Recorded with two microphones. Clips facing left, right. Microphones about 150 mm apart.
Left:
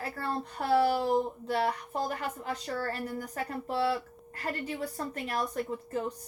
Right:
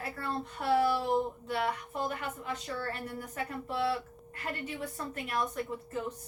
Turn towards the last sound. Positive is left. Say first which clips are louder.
# left 3 dB
turn(degrees=35)  # may be behind; listen again after turning